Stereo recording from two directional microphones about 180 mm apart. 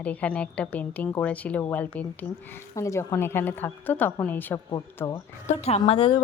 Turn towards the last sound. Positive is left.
turn(degrees=30)  # may be behind; listen again after turning